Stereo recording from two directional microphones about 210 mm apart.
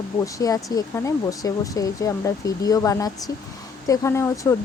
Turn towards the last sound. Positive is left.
turn(degrees=15)  # may be behind; listen again after turning